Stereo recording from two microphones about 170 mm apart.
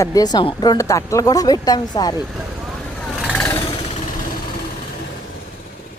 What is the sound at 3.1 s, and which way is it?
Vehicle, 5° right (ahead or behind).